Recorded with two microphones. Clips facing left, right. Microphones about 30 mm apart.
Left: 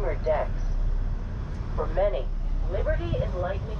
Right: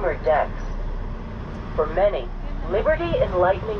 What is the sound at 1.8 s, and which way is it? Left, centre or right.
Speech, right.